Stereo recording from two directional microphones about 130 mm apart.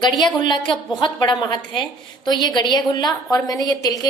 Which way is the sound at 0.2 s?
35° left (ahead or behind).